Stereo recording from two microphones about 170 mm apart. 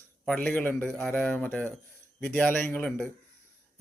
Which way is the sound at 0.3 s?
10° left (ahead or behind).